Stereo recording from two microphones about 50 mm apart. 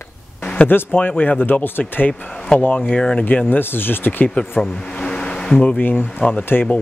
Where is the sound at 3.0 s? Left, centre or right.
Left.